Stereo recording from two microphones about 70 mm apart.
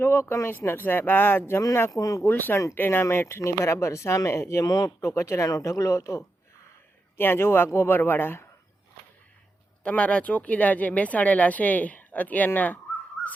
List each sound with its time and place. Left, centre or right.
0.0 s speech: left
1.9 s speech: left
2.2 s speech: left
4.6 s speech: left
5.0 s speech: left
5.5 s speech: left
7.2 s speech: left
9.8 s speech: centre